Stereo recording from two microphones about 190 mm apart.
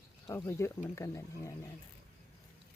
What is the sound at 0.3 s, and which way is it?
Speech, 15° left (ahead or behind).